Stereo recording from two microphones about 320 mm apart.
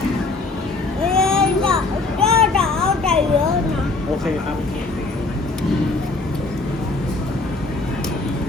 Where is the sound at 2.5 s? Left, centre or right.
Centre.